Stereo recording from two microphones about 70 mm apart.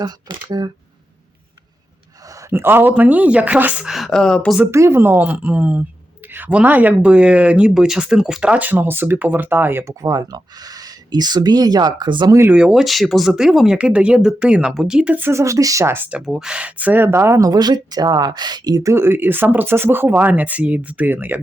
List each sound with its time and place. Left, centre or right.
0.0 s speech: right
2.5 s a man's voice: right
2.9 s speech: right
3.8 s speech: centre
4.1 s speech: centre
4.6 s speech: right
9.8 s speech: right
12.5 s speech: centre
15.3 s speech: right
16.2 s speech: centre; by 17.4 s right
17.4 s speech: right
18.8 s speech: right